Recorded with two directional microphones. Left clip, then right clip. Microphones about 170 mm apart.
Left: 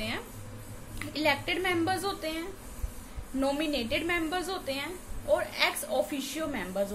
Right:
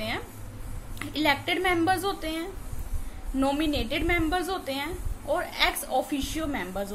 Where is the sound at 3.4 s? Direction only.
15° right (ahead or behind).